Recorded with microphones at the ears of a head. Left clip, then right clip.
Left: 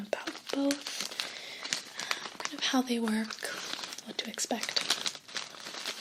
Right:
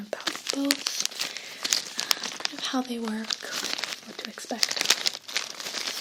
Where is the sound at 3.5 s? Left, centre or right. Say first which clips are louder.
Right 8 dB; right.